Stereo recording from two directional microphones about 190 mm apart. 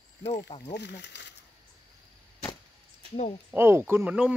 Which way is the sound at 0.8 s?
65° left (ahead or behind).